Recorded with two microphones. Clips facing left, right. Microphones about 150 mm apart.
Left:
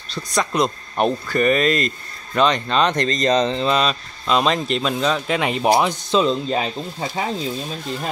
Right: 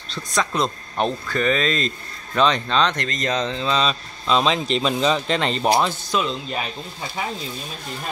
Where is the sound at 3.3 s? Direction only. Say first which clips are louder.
Left 5 dB; 20° left (ahead or behind).